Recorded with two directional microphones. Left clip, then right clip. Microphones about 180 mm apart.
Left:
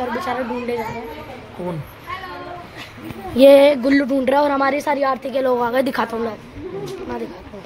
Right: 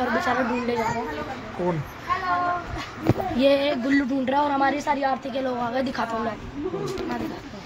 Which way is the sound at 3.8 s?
40° left (ahead or behind).